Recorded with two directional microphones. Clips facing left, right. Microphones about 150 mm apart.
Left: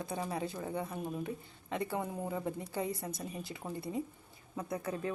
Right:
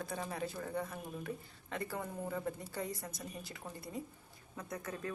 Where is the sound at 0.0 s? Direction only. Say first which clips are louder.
Left 3 dB; 20° left (ahead or behind).